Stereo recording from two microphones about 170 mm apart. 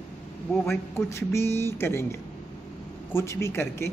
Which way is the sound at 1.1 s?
15° left (ahead or behind).